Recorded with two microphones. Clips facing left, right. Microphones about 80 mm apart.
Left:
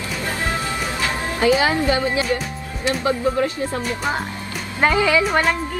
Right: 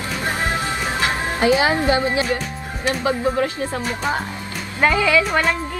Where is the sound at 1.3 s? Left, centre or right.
Right.